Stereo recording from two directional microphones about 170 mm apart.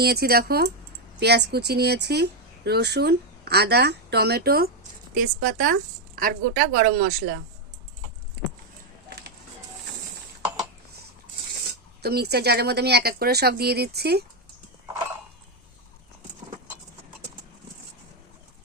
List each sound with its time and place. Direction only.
0.0 s a woman's voice: 65° right (ahead or behind)
12.0 s speech: 70° right (ahead or behind)